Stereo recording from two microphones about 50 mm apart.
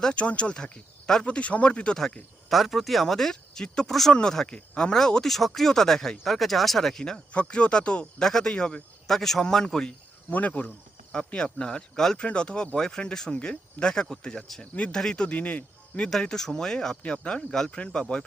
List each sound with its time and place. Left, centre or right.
0.0 s speech: left
2.5 s speech: centre
8.2 s speech: centre
8.5 s speech: left
9.0 s speech: centre
10.2 s speech: left
16.2 s speech: centre